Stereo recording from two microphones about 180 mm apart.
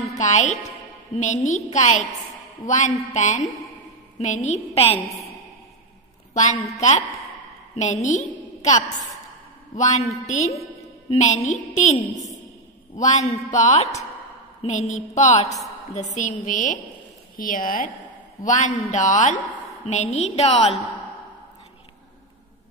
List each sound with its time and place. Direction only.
0.2 s a woman's voice: 40° left (ahead or behind)
6.3 s a woman's voice: 40° left (ahead or behind)